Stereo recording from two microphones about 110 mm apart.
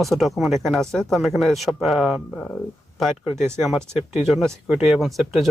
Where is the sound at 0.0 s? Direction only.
Centre (ahead or behind).